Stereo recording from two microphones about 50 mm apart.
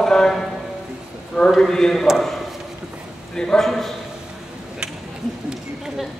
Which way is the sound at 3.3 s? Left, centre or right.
Centre.